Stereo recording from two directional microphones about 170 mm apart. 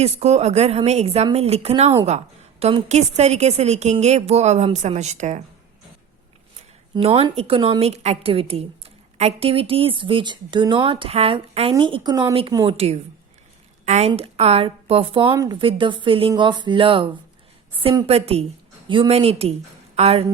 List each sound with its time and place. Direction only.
0.0 s a woman's voice: 40° right (ahead or behind)
6.9 s a woman's voice: 35° right (ahead or behind)
15.3 s speech: 20° right (ahead or behind)
15.5 s a woman's voice: 30° right (ahead or behind)